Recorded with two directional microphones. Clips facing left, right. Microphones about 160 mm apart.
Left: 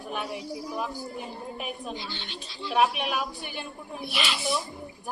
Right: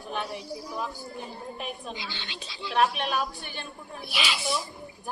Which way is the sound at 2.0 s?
90° right.